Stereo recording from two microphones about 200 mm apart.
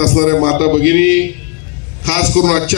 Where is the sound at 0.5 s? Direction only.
90° right.